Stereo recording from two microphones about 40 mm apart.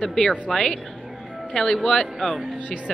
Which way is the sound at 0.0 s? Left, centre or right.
Centre.